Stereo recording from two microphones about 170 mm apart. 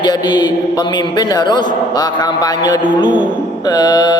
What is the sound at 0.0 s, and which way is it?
A man's voice, 25° left (ahead or behind).